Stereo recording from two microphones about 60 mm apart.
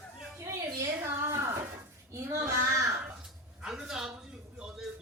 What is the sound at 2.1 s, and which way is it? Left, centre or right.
Child singing, right.